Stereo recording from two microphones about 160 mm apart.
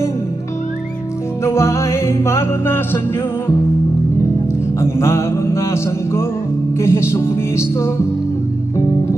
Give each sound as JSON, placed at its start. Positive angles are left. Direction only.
{"t": 1.4, "sound": "music", "side_deg": 15}
{"t": 4.7, "sound": "music", "side_deg": 15}